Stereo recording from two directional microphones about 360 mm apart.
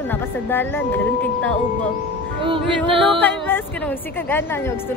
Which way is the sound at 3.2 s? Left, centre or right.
Centre.